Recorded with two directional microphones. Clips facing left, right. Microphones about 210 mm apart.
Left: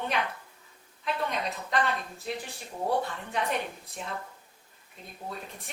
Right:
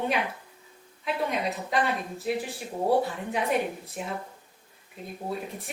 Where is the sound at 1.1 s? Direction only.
10° right (ahead or behind).